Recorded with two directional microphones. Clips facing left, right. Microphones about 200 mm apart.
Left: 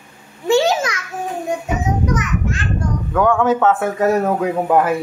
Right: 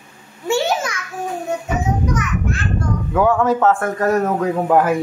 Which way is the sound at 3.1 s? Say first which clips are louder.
Left 1 dB; 5° right (ahead or behind).